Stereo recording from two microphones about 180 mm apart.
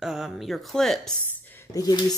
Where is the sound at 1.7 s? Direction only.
20° left (ahead or behind).